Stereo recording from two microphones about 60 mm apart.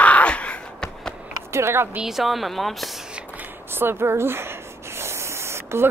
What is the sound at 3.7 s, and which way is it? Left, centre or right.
Spray, right.